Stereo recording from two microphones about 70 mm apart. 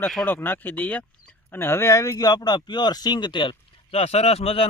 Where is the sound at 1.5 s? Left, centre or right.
Left.